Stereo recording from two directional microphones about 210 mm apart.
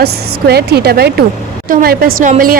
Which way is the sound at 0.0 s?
50° right (ahead or behind).